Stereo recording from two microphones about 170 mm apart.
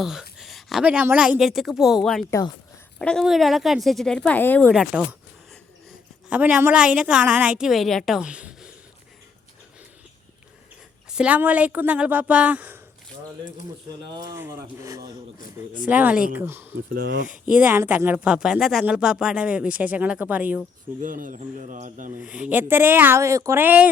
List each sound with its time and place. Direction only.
0.0 s a woman's voice: 5° right (ahead or behind)
4.7 s a woman's voice: 5° right (ahead or behind)
6.2 s a woman's voice: 10° right (ahead or behind)
11.1 s speech: 5° right (ahead or behind)
14.1 s speech: 25° right (ahead or behind)
15.8 s speech: 10° right (ahead or behind)
16.9 s speech: 75° right (ahead or behind)
17.2 s speech: 5° right (ahead or behind)
21.0 s speech: 50° right (ahead or behind)
22.1 s speech: 5° right (ahead or behind)